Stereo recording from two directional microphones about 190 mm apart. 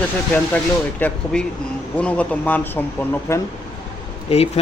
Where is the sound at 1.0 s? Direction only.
10° left (ahead or behind).